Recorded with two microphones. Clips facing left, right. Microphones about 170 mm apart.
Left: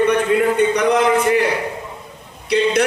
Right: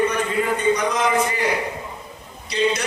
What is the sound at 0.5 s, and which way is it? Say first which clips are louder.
Speech: left 5 dB; 65° left (ahead or behind).